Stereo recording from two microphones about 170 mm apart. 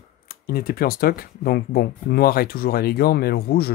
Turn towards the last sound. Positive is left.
turn(degrees=65)  # may be behind; listen again after turning